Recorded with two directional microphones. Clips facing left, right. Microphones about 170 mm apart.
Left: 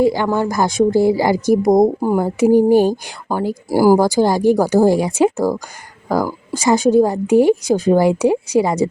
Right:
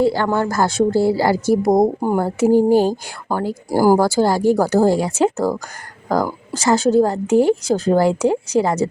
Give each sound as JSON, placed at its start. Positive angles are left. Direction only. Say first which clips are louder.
{"t": 0.0, "sound": "a woman's voice", "louder": "left 1 dB", "side_deg": 15}